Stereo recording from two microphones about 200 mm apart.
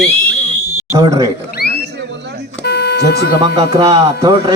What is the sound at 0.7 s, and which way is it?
Fire alarm, 10° right (ahead or behind).